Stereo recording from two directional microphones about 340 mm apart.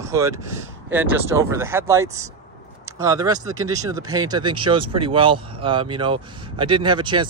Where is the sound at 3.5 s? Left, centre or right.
Right.